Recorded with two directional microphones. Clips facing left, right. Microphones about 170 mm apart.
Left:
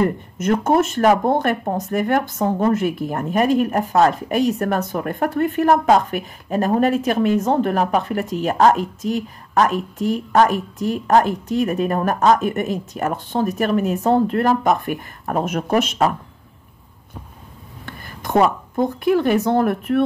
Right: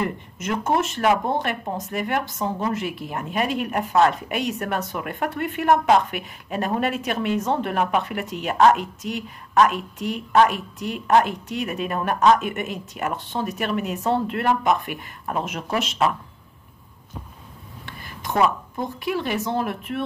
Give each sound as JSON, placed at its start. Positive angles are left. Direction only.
{"t": 0.0, "sound": "a woman's voice", "side_deg": 45}
{"t": 17.8, "sound": "a sound", "side_deg": 45}
{"t": 18.8, "sound": "speech", "side_deg": 50}